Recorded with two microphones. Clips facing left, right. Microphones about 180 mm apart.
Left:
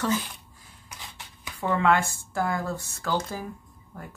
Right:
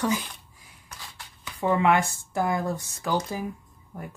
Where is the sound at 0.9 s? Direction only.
15° left (ahead or behind).